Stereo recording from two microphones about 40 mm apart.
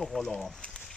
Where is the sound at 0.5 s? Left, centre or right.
Left.